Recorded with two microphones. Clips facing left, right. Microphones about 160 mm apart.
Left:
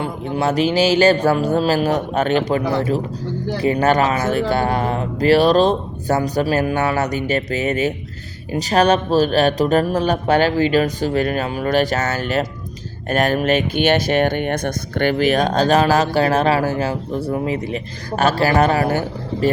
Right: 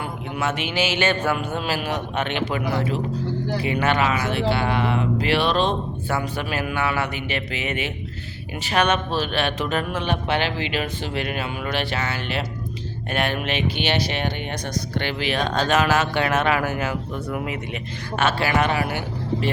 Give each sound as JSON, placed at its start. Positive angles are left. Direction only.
{"t": 0.0, "sound": "speech", "side_deg": 35}